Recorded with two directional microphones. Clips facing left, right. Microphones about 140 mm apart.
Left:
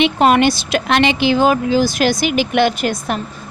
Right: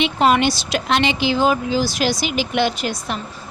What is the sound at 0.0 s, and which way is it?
A woman's voice, 55° left (ahead or behind).